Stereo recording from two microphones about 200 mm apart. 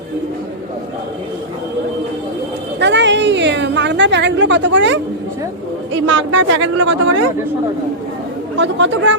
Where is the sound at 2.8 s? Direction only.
60° right (ahead or behind).